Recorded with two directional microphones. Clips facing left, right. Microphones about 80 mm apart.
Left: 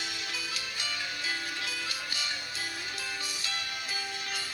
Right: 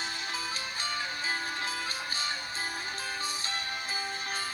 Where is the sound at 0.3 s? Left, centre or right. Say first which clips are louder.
Right 2 dB; right.